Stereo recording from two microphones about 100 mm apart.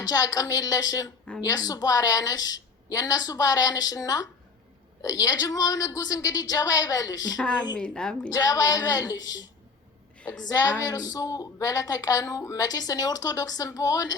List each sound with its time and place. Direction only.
0.0 s a woman's voice: 35° left (ahead or behind)
7.3 s speech: 10° left (ahead or behind)
8.3 s a woman's voice: 35° left (ahead or behind)